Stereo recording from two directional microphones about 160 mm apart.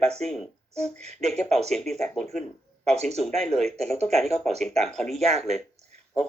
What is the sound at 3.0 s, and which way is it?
Speech, 40° right (ahead or behind).